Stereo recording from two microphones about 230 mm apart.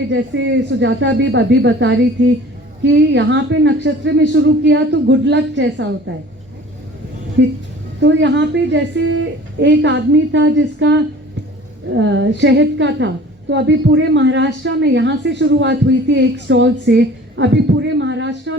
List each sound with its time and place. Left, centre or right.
0.1 s a woman's voice: right
7.4 s a woman's voice: right